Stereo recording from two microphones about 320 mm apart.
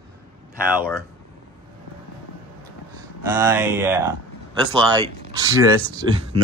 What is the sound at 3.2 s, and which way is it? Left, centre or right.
Speech, centre.